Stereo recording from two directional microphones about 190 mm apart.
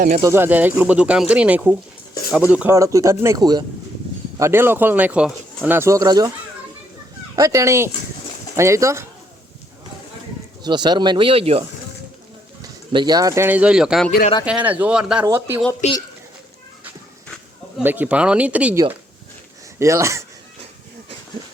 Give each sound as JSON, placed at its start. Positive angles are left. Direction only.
{"t": 0.2, "sound": "speech", "side_deg": -15}
{"t": 7.3, "sound": "speech", "side_deg": -15}
{"t": 10.6, "sound": "speech", "side_deg": -25}
{"t": 12.6, "sound": "speech", "side_deg": -25}
{"t": 15.8, "sound": "speech", "side_deg": 35}
{"t": 17.2, "sound": "a sound", "side_deg": 0}
{"t": 17.8, "sound": "speech", "side_deg": -10}
{"t": 19.8, "sound": "speech", "side_deg": -15}